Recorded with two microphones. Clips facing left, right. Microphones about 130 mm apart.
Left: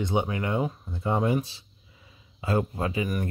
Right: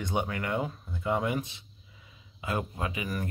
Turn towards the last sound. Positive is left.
turn(degrees=30)  # may be behind; listen again after turning